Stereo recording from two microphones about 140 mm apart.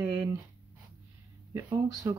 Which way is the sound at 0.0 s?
20° right (ahead or behind).